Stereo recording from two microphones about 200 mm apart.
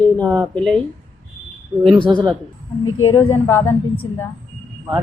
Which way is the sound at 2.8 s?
90° left.